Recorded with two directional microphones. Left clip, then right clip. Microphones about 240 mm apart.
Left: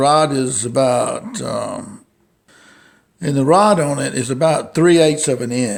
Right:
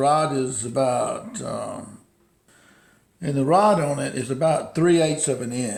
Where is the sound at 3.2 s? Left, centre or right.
Left.